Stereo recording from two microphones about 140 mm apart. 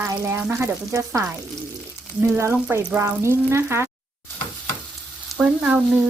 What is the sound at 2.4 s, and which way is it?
A woman's voice, 20° right (ahead or behind).